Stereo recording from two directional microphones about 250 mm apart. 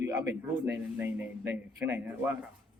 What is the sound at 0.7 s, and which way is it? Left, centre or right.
Speech, centre.